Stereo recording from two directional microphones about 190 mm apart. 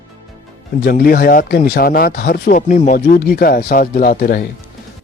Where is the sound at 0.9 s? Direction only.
50° left (ahead or behind).